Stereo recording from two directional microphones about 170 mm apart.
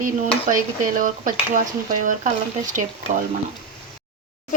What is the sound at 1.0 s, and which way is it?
Speech, 50° right (ahead or behind).